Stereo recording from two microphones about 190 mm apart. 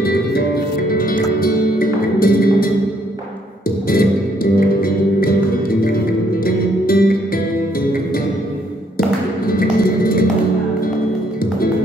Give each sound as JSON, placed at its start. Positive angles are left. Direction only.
{"t": 0.8, "sound": "music", "side_deg": 50}
{"t": 3.8, "sound": "music", "side_deg": 50}
{"t": 6.4, "sound": "music", "side_deg": 50}
{"t": 9.5, "sound": "music", "side_deg": 50}